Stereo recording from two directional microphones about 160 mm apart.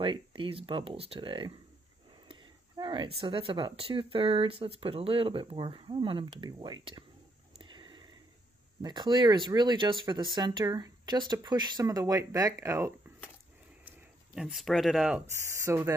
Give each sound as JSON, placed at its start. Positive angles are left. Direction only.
{"t": 0.0, "sound": "speech", "side_deg": -35}
{"t": 7.7, "sound": "sniff", "side_deg": -30}
{"t": 8.8, "sound": "speech", "side_deg": -25}
{"t": 13.8, "sound": "speech", "side_deg": -5}
{"t": 15.5, "sound": "speech", "side_deg": -15}